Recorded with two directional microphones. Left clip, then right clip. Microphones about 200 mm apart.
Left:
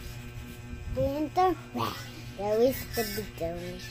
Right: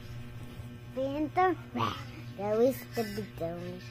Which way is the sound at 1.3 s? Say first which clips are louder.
Left 1 dB; 20° left (ahead or behind).